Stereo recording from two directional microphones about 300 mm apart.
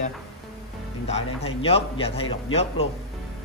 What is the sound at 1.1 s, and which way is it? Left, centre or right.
A man's voice, centre.